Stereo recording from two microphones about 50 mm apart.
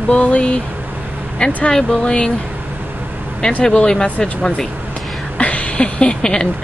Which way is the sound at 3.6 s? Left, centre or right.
Centre.